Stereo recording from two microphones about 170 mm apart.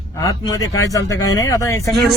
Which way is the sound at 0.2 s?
20° left (ahead or behind).